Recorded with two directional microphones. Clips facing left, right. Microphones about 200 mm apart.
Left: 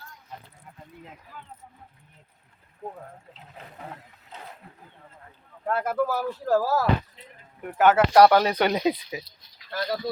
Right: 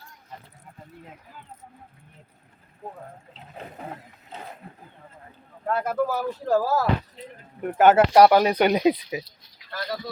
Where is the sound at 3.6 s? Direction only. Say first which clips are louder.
Right 4 dB; 30° right (ahead or behind).